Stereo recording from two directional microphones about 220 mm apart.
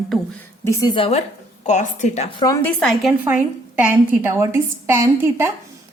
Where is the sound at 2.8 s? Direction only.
Centre (ahead or behind).